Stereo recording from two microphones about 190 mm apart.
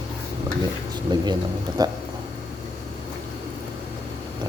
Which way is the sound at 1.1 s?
20° right (ahead or behind).